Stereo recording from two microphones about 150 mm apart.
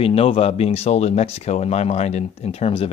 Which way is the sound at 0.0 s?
40° left (ahead or behind).